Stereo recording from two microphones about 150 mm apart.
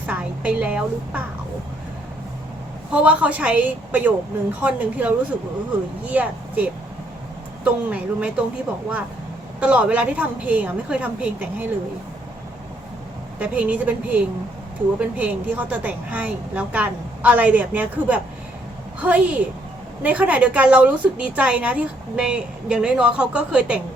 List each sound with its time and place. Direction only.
0.0 s a woman's voice: 10° right (ahead or behind)
2.9 s a woman's voice: 10° right (ahead or behind)
9.6 s a woman's voice: 10° right (ahead or behind)
13.4 s a woman's voice: 10° right (ahead or behind)